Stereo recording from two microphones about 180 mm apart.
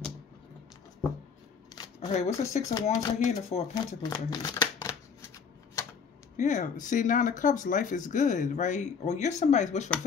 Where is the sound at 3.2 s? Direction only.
40° left (ahead or behind).